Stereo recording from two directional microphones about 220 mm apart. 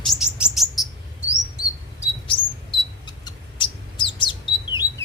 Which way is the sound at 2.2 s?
20° left (ahead or behind).